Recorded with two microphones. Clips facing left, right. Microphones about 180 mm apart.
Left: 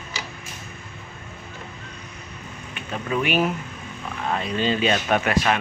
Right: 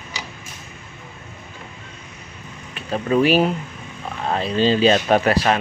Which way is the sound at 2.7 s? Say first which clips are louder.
Right 7 dB; 35° right (ahead or behind).